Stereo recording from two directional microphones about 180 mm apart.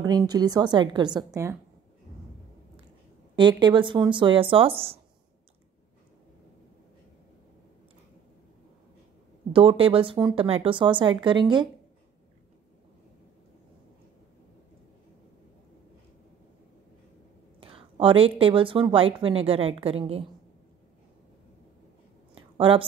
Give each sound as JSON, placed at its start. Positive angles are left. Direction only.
{"t": 0.0, "sound": "speech", "side_deg": -20}
{"t": 3.3, "sound": "speech", "side_deg": -25}
{"t": 9.5, "sound": "speech", "side_deg": -30}
{"t": 17.6, "sound": "a woman's voice", "side_deg": -30}
{"t": 22.6, "sound": "speech", "side_deg": -30}